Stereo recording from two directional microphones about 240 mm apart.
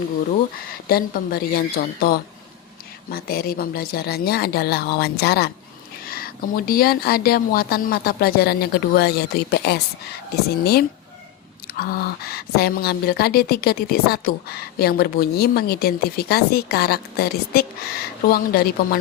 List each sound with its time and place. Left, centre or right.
0.7 s speech: left